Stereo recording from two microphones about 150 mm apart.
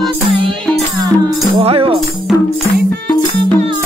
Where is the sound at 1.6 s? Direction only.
40° right (ahead or behind).